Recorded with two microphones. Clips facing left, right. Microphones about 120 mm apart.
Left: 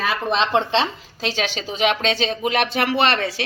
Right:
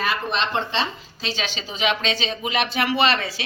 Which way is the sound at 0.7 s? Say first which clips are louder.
Left 5 dB; 80° left.